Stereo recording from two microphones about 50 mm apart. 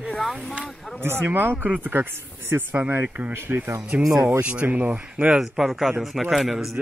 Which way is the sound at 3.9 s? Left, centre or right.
Right.